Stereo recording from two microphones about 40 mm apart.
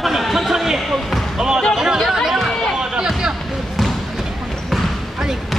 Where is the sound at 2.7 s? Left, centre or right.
Centre.